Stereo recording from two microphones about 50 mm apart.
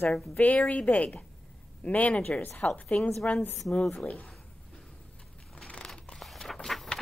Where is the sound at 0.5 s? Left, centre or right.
Left.